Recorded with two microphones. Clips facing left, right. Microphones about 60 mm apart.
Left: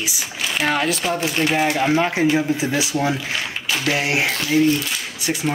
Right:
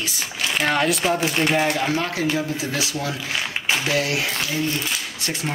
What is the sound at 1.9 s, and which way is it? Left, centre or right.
Speech, left.